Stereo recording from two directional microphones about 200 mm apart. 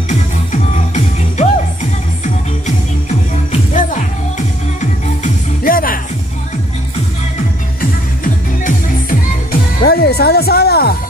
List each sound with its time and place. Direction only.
0.1 s music: 35° left (ahead or behind)
3.7 s music: 40° left (ahead or behind)
8.2 s music: 45° left (ahead or behind)